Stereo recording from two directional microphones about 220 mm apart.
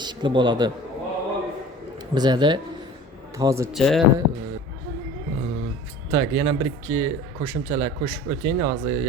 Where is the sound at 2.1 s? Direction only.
20° right (ahead or behind).